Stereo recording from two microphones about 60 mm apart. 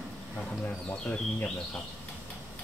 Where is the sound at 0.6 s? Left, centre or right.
Left.